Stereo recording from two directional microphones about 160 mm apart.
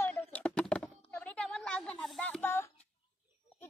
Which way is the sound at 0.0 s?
10° left (ahead or behind).